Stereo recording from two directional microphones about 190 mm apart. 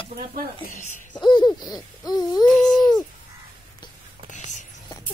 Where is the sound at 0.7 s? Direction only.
45° left (ahead or behind).